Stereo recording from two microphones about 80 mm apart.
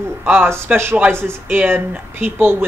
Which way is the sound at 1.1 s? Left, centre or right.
Right.